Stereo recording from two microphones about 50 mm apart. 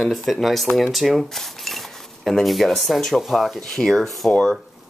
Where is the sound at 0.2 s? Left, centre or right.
Centre.